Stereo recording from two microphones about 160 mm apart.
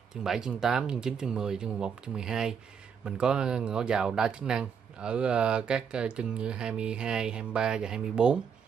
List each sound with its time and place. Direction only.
0.2 s speech: 5° right (ahead or behind)